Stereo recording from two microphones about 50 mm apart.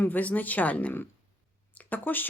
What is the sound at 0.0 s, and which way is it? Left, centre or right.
Speech, left.